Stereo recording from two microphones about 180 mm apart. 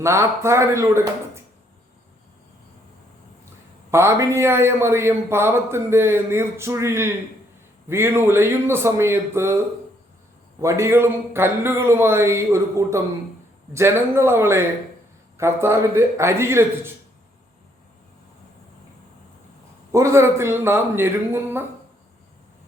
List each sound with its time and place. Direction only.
0.0 s a man's voice: 15° right (ahead or behind)
3.9 s a man's voice: 15° right (ahead or behind)
10.6 s a man's voice: 15° right (ahead or behind)
19.9 s a man's voice: 15° right (ahead or behind)